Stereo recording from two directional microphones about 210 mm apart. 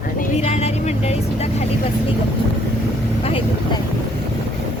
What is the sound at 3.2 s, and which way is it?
Speech, 25° left (ahead or behind).